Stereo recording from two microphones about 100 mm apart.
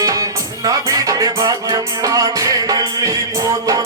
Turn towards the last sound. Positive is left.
turn(degrees=-35)  # may be behind; listen again after turning